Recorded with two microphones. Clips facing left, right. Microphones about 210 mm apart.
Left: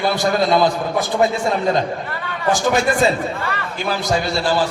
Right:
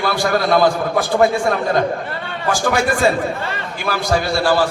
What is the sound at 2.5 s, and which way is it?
Speech, 20° left (ahead or behind).